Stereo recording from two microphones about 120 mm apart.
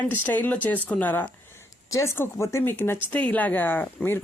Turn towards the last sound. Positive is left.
turn(degrees=15)  # may be behind; listen again after turning